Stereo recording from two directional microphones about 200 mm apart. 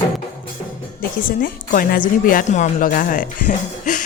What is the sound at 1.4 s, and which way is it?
Speech, 45° left (ahead or behind).